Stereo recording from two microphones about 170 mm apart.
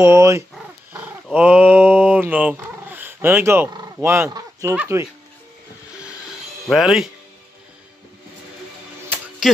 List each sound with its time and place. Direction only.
0.0 s speech: 15° right (ahead or behind)
6.7 s speech: centre (ahead or behind)
9.1 s music: 10° right (ahead or behind)